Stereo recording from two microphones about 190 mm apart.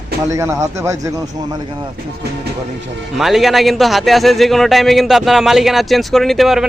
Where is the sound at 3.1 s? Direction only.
Centre (ahead or behind).